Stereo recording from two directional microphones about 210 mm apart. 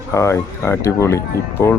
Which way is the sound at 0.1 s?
15° left (ahead or behind).